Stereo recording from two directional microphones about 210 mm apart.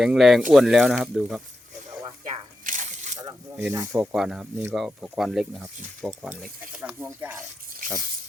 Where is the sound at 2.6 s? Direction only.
40° right (ahead or behind).